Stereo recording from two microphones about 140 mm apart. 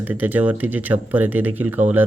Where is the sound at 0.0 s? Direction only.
10° right (ahead or behind).